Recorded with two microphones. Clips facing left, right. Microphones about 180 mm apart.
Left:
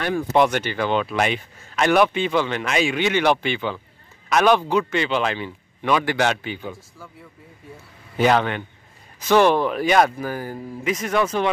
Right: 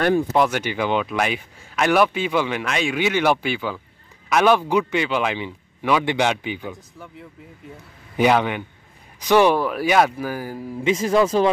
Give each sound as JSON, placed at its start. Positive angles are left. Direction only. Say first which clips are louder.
{"t": 0.3, "sound": "a man's voice", "louder": "left 1 dB", "side_deg": -5}
{"t": 8.2, "sound": "a man's voice", "louder": "right 1 dB", "side_deg": -10}
{"t": 10.8, "sound": "speech", "louder": "right 4 dB", "side_deg": -30}